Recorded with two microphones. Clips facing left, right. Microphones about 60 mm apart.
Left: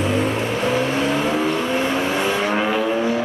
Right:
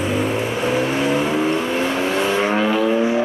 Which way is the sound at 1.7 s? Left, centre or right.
Centre.